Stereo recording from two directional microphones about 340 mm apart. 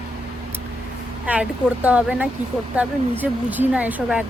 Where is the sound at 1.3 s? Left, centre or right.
Centre.